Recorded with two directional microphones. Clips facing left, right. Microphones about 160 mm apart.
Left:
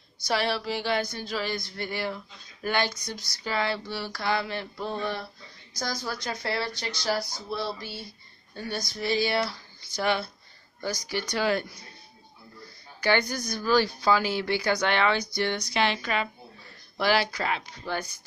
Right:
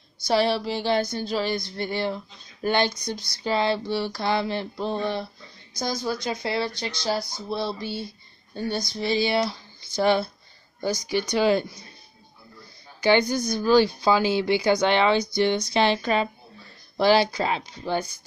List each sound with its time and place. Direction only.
0.2 s speech: 25° right (ahead or behind)
13.0 s speech: 20° right (ahead or behind)